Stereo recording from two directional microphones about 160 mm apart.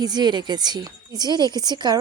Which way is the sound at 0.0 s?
25° right (ahead or behind).